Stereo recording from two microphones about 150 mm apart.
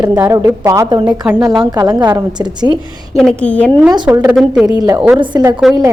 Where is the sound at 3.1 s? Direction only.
5° left (ahead or behind).